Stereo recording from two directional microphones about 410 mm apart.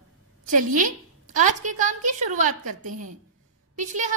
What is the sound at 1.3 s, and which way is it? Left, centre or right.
A woman's voice, centre.